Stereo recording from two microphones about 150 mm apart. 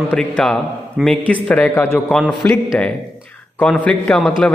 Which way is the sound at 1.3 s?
10° left (ahead or behind).